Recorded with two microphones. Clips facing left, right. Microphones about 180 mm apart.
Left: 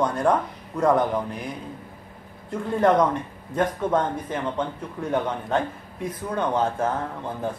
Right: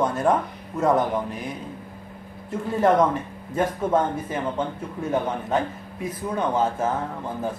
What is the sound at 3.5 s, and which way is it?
Speech, 5° right (ahead or behind).